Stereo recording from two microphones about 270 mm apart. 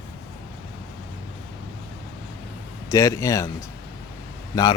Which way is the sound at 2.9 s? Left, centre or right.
Centre.